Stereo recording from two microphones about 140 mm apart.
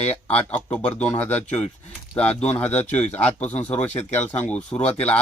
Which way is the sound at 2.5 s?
10° left (ahead or behind).